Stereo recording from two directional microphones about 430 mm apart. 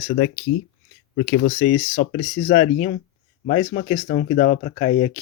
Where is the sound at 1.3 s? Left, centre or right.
Left.